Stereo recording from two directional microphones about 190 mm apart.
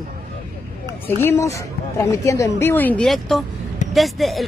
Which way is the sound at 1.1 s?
10° left (ahead or behind).